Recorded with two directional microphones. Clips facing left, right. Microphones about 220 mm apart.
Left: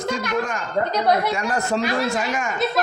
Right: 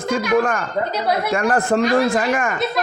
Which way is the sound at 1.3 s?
55° right (ahead or behind).